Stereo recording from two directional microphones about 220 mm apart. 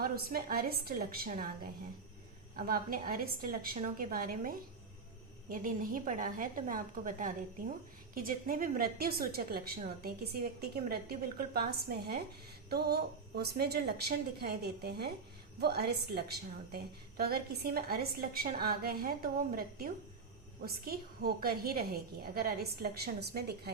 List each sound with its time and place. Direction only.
0.0 s a woman's voice: 40° right (ahead or behind)
2.6 s a woman's voice: 40° right (ahead or behind)